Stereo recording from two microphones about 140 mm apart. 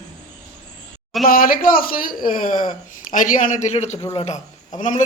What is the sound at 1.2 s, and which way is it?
Speech, 90° left.